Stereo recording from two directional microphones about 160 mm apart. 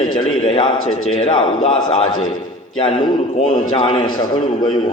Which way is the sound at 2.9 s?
30° left (ahead or behind).